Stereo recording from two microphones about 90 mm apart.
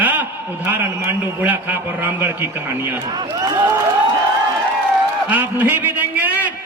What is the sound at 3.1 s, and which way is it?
Speech, 55° right (ahead or behind).